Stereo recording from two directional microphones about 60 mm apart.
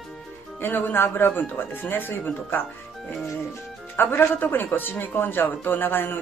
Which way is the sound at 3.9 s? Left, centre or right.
Left.